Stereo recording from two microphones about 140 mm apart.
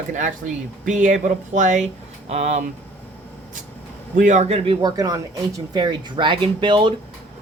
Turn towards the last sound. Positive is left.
turn(degrees=-35)  # may be behind; listen again after turning